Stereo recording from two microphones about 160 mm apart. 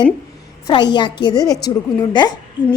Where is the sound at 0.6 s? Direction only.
30° left (ahead or behind).